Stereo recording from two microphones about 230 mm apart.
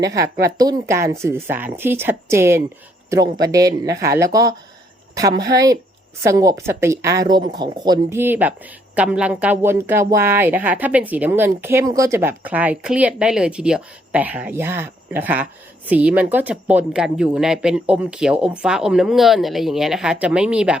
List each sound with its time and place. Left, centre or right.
0.0 s speech: centre